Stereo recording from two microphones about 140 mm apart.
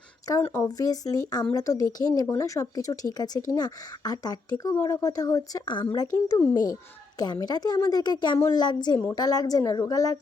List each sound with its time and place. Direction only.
0.5 s speech: 25° left (ahead or behind)